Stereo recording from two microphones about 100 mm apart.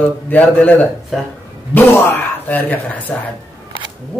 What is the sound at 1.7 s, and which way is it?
Speech, 20° left (ahead or behind).